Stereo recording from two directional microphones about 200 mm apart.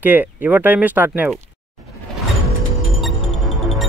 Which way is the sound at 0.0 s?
10° right (ahead or behind).